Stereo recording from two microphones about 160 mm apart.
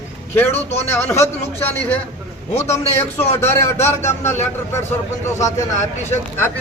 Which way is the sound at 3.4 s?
15° left (ahead or behind).